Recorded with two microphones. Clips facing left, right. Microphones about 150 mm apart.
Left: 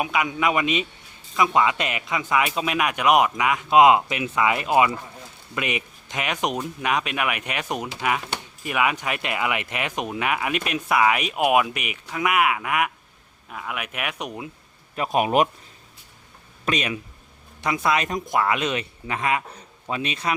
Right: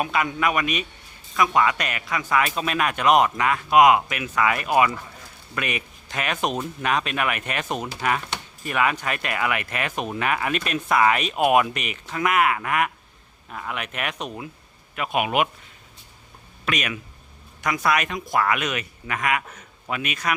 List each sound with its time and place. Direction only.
0.0 s speech: 10° left (ahead or behind)
14.9 s a man's voice: 35° left (ahead or behind)
16.6 s speech: 25° left (ahead or behind)